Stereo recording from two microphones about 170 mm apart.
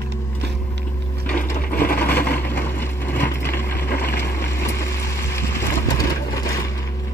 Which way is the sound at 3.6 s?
70° left (ahead or behind).